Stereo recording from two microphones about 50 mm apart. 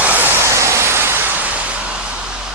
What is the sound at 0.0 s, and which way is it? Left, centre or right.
Vehicle, right.